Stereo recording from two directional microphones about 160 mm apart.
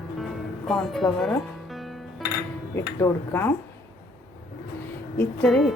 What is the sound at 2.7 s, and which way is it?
Speech, 15° left (ahead or behind).